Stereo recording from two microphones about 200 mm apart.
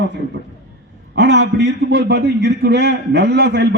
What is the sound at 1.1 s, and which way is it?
A man's voice, 60° right (ahead or behind).